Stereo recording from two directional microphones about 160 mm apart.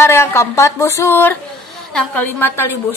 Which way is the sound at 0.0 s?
15° left (ahead or behind).